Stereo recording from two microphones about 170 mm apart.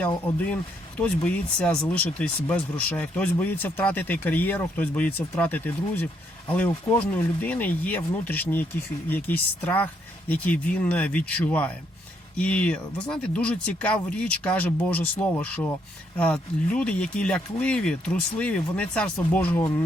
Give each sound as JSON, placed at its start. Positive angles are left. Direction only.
{"t": 0.3, "sound": "speech", "side_deg": 5}